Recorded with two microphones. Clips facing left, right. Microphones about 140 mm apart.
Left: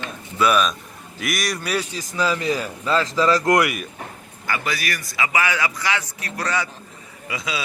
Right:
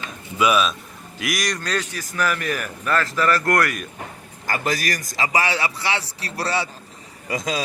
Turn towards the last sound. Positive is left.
turn(degrees=-40)  # may be behind; listen again after turning